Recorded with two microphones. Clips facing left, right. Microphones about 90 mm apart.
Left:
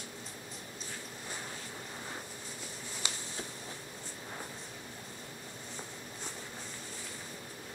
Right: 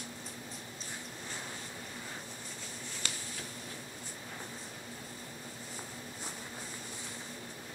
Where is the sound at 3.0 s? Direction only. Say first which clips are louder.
Left 2 dB; 20° left (ahead or behind).